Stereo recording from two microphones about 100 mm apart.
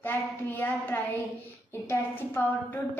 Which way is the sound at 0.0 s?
20° left (ahead or behind).